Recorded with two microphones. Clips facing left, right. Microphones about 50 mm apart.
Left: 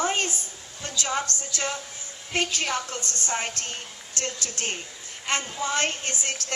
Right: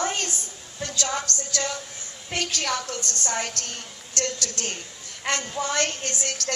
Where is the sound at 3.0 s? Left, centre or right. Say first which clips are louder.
Right 2 dB; right.